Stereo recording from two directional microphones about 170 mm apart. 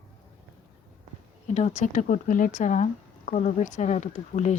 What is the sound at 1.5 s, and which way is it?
Speech, 40° left (ahead or behind).